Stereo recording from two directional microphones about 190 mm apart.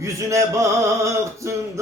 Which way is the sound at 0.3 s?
15° right (ahead or behind).